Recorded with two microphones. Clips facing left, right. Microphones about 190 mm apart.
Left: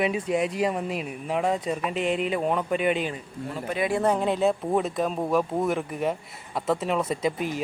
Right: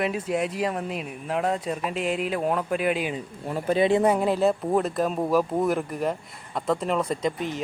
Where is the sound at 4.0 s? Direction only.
10° right (ahead or behind).